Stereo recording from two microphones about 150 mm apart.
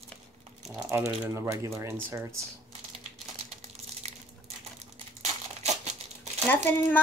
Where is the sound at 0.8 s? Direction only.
20° right (ahead or behind).